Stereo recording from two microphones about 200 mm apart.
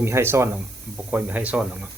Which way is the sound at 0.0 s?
10° right (ahead or behind).